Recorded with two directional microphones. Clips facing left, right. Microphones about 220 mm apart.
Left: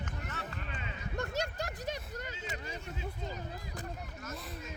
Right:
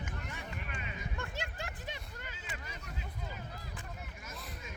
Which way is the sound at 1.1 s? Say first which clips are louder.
Left 10 dB; 40° left (ahead or behind).